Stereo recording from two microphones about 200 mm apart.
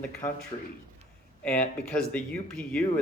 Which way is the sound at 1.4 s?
5° left (ahead or behind).